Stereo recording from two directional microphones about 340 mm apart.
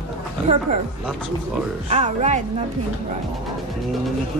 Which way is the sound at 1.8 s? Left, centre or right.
Centre.